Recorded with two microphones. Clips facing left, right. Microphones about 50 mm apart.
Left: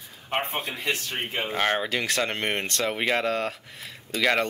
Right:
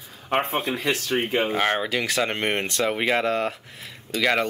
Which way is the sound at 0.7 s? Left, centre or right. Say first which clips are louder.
Right 5 dB; right.